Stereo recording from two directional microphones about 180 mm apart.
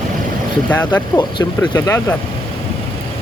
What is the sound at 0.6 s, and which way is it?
Speech, 10° left (ahead or behind).